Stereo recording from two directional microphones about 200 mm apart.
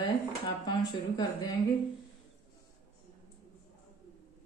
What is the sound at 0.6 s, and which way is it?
Speech, 20° left (ahead or behind).